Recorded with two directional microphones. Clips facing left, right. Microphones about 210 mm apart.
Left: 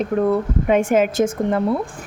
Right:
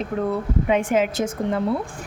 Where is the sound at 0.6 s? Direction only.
50° left (ahead or behind).